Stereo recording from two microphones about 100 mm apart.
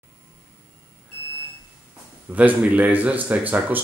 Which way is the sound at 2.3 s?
15° right (ahead or behind).